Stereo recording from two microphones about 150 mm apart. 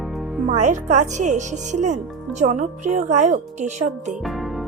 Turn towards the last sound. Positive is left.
turn(degrees=0)  # may be behind; listen again after turning